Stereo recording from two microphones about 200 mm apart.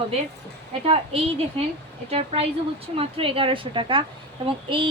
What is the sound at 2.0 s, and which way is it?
A woman's voice, 30° right (ahead or behind).